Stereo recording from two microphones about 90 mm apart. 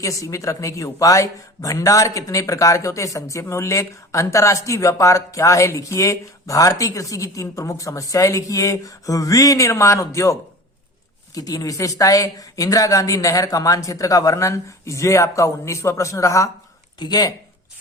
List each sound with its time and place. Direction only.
0.0 s speech: 35° left (ahead or behind)
11.3 s speech: 40° left (ahead or behind)
17.0 s speech: 45° left (ahead or behind)